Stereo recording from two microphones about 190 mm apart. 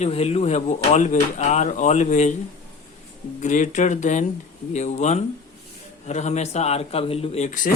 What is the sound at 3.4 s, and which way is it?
Speech, 40° left (ahead or behind).